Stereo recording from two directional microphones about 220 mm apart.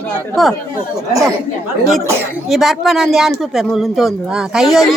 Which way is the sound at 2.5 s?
Centre (ahead or behind).